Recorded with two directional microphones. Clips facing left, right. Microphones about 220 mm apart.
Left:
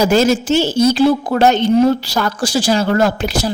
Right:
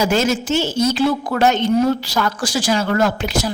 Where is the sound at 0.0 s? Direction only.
35° left (ahead or behind).